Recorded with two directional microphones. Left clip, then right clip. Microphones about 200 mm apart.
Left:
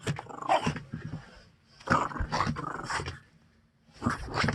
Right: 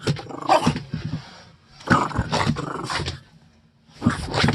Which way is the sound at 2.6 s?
10° left (ahead or behind).